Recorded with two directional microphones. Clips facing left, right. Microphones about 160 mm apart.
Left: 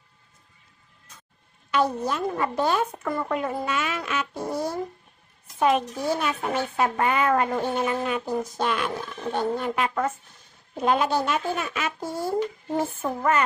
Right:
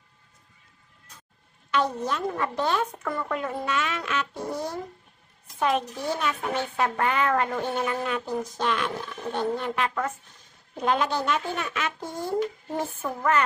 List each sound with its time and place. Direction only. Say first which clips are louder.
1.7 s a woman's voice: left 2 dB; 10° left (ahead or behind)